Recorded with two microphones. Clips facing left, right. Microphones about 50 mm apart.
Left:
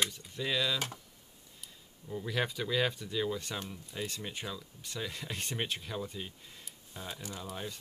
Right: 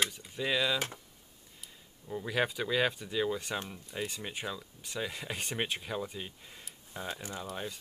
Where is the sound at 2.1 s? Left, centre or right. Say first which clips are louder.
Right 2 dB; centre.